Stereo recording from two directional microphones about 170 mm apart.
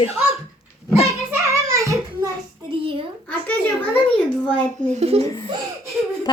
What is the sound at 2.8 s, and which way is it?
Speech, 30° right (ahead or behind).